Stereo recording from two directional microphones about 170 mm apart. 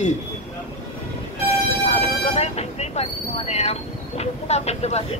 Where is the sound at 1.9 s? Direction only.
40° left (ahead or behind).